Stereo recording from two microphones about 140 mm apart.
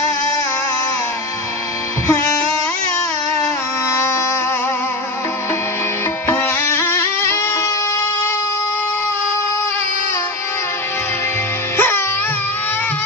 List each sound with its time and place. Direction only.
6.2 s music: 15° left (ahead or behind)
11.7 s music: 15° left (ahead or behind)